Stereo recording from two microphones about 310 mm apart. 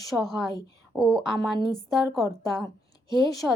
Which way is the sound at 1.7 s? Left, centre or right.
Centre.